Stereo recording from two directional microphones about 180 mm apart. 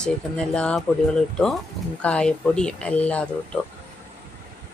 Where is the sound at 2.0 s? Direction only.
5° left (ahead or behind).